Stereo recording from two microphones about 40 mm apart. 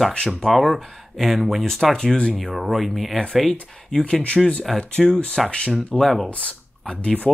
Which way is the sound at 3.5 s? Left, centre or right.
Left.